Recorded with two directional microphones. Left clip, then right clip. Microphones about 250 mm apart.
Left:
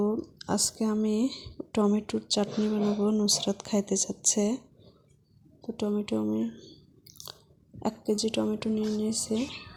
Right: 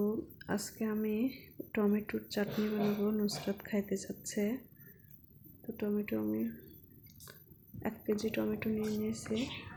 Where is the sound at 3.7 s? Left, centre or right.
Left.